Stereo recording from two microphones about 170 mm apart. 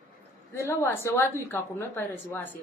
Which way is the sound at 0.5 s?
15° left (ahead or behind).